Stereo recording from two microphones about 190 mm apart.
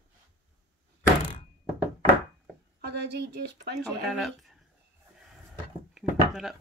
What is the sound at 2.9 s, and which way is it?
Speech, 60° right (ahead or behind).